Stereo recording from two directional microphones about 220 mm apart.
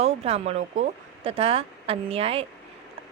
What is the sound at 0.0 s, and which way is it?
Speech, 30° right (ahead or behind).